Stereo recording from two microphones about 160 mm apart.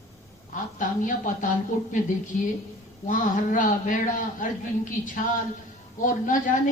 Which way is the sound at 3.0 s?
55° left (ahead or behind).